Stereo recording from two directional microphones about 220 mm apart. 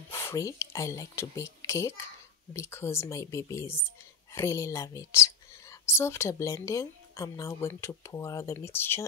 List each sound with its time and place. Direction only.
0.1 s speech: 10° left (ahead or behind)